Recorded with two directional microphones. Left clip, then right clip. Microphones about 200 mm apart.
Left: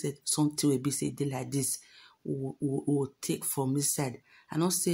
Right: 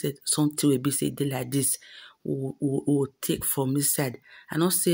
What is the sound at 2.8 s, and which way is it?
Speech, 15° right (ahead or behind).